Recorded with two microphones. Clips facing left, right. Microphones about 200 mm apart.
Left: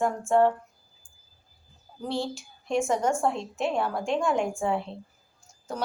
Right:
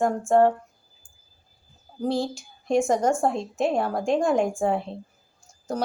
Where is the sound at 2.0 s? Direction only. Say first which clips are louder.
Right 5 dB; 40° right (ahead or behind).